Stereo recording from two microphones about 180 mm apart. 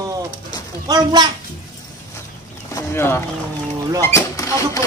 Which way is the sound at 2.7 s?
15° left (ahead or behind).